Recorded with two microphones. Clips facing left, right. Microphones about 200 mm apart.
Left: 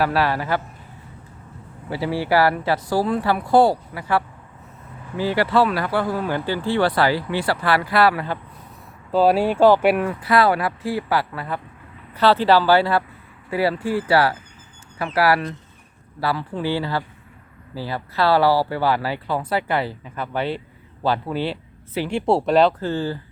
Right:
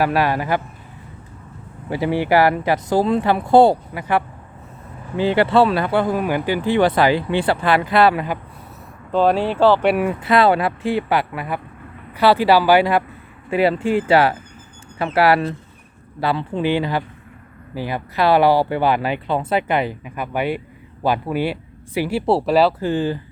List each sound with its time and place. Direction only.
0.0 s speech: 15° right (ahead or behind)
1.9 s speech: 20° right (ahead or behind)
9.1 s speech: 5° left (ahead or behind)
10.0 s speech: 25° right (ahead or behind); by 22.9 s 5° right (ahead or behind)
22.9 s speech: 15° right (ahead or behind)